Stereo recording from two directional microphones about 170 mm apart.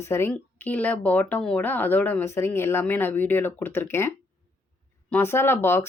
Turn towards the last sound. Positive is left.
turn(degrees=15)  # may be behind; listen again after turning